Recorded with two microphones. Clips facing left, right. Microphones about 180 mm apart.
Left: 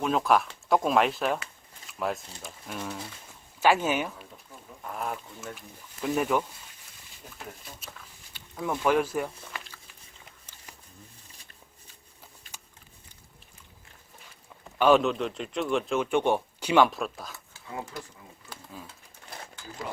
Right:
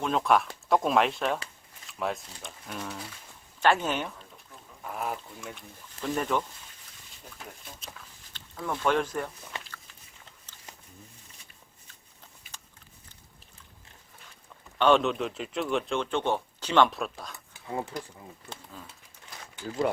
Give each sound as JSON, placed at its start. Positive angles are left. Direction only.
{"t": 0.0, "sound": "speech", "side_deg": 5}
{"t": 4.8, "sound": "duck", "side_deg": -5}
{"t": 5.5, "sound": "speech", "side_deg": 10}
{"t": 9.6, "sound": "a sound", "side_deg": 5}
{"t": 14.8, "sound": "speech", "side_deg": 5}
{"t": 17.5, "sound": "a sound", "side_deg": -20}